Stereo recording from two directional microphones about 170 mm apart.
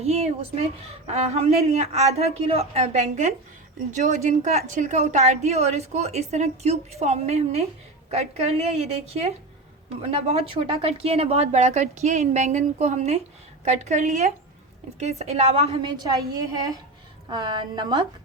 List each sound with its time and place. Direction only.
0.0 s a woman's voice: 40° right (ahead or behind)